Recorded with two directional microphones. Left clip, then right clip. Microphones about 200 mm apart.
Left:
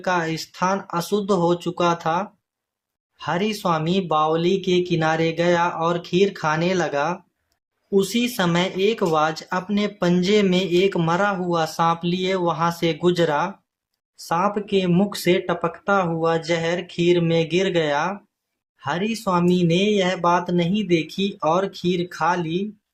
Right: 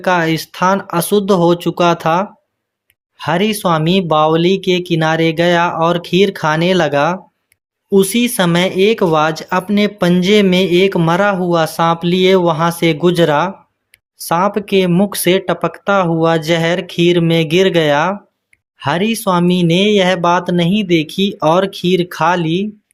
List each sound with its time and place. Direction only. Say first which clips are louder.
0.0 s speech: right 9 dB; 40° right (ahead or behind)